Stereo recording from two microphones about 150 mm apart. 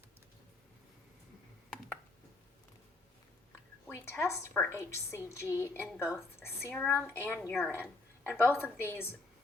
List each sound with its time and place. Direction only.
3.8 s a woman's voice: 15° left (ahead or behind)